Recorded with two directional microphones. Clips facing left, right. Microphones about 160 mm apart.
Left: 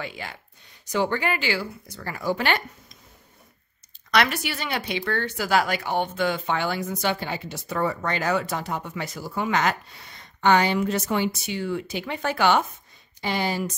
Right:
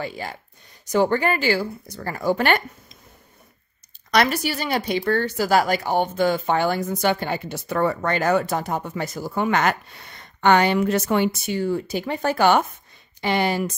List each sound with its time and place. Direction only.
0.0 s speech: 40° right (ahead or behind)
4.1 s speech: 40° right (ahead or behind)
13.2 s speech: 65° right (ahead or behind)